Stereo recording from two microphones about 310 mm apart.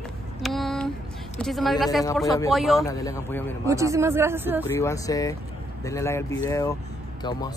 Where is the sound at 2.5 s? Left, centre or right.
Centre.